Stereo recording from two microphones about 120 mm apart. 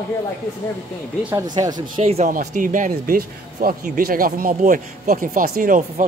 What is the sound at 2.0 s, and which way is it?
Speech, 65° right (ahead or behind).